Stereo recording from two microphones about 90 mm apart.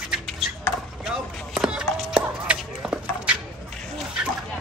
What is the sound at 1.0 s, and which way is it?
Chop, 5° right (ahead or behind).